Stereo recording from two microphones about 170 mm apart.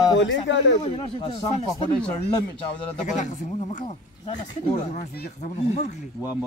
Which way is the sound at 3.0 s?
45° left (ahead or behind).